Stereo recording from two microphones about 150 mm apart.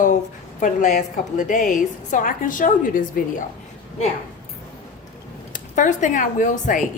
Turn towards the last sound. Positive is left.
turn(degrees=60)  # may be behind; listen again after turning